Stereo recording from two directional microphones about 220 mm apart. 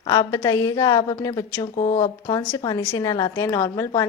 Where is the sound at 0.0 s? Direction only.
15° left (ahead or behind).